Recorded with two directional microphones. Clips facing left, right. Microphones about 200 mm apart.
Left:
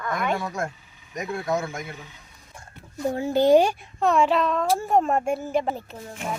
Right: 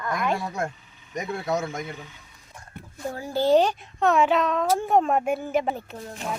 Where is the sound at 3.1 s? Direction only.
20° left (ahead or behind).